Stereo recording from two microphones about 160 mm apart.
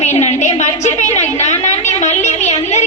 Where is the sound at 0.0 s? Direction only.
45° left (ahead or behind).